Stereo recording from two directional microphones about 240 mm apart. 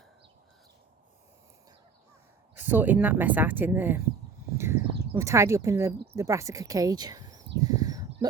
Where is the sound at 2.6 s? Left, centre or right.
Centre.